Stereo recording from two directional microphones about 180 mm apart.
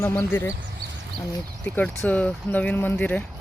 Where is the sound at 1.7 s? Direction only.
5° left (ahead or behind).